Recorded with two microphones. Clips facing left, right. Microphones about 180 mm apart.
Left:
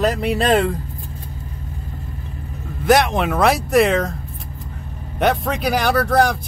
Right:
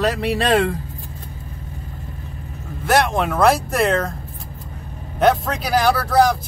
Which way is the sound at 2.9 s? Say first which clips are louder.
Even; centre (ahead or behind).